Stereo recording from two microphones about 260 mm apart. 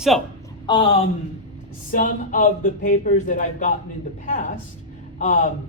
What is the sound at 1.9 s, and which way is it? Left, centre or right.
Speech, left.